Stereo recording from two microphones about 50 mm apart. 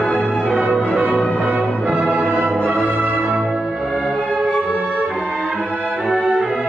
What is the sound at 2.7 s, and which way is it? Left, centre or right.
Music, right.